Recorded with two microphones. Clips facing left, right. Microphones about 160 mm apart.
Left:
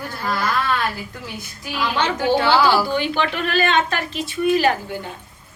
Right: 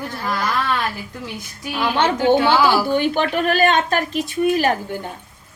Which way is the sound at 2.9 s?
45° right (ahead or behind).